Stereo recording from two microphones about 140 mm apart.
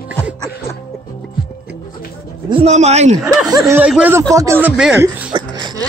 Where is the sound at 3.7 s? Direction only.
10° right (ahead or behind).